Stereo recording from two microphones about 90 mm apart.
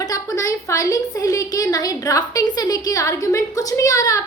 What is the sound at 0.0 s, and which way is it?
A woman's voice, 40° left (ahead or behind).